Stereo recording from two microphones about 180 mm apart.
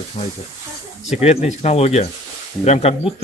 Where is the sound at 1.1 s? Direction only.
35° left (ahead or behind).